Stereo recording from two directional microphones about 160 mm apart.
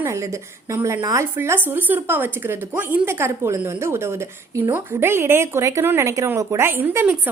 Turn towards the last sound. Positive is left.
turn(degrees=-15)  # may be behind; listen again after turning